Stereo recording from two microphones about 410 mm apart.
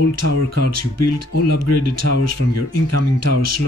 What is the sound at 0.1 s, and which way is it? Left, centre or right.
Speech, right.